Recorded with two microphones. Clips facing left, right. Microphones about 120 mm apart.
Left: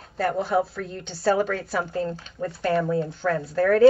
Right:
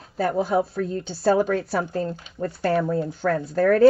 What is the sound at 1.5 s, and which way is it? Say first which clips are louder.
Speech: right 3 dB; 40° right (ahead or behind).